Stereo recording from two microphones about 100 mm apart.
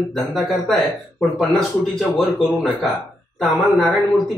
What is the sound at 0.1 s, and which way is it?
Speech, 5° left (ahead or behind).